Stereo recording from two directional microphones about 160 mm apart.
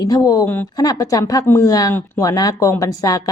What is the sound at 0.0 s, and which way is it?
Speech, 20° left (ahead or behind).